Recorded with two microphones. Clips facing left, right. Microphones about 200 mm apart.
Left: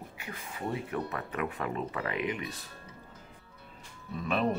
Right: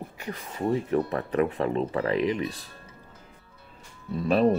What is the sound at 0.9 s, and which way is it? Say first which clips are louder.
Speech: right 10 dB; 35° right (ahead or behind).